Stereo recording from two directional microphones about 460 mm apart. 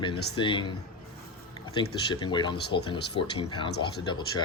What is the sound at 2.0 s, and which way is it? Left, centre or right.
Speech, centre.